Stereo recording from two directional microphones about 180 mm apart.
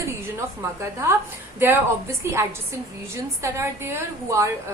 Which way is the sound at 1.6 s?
15° right (ahead or behind).